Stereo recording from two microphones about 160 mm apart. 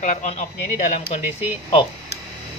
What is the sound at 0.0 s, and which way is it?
Speech, 50° left (ahead or behind).